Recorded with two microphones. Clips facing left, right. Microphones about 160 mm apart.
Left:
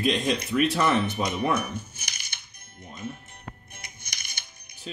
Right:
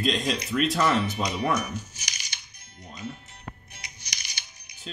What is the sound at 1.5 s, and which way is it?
Music, 55° left (ahead or behind).